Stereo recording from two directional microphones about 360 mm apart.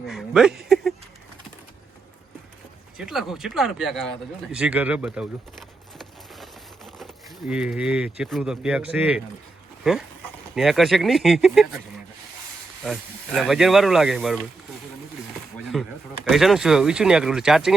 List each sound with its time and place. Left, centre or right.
0.1 s speech: centre
3.0 s speech: centre
4.5 s a sound: centre
7.0 s speech: centre
12.8 s speech: centre
15.5 s a sound: centre
16.3 s speech: centre